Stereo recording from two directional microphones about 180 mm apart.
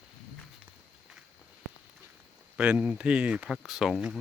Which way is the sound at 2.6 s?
5° right (ahead or behind).